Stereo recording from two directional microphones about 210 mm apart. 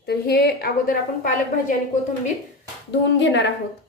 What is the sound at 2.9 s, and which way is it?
Speech, 55° left (ahead or behind).